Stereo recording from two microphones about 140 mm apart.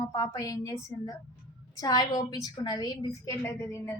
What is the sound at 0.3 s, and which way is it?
Speech, 25° left (ahead or behind).